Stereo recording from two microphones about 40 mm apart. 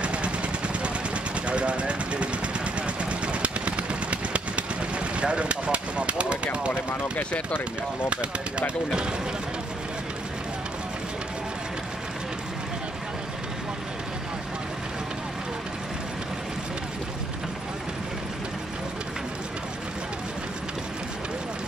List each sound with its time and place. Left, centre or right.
0.0 s vehicle: right
5.2 s speech: right
6.7 s speech: left
8.1 s speech: right